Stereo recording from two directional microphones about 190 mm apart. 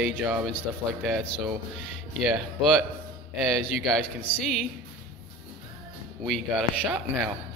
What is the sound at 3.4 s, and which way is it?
Speech, centre (ahead or behind).